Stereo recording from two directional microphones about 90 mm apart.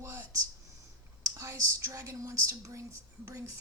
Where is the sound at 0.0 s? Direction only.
30° right (ahead or behind).